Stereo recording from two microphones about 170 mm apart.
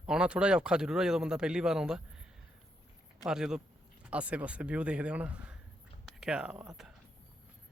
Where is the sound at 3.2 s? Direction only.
5° right (ahead or behind).